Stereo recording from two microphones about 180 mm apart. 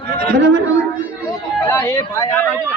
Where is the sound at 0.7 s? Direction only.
5° right (ahead or behind).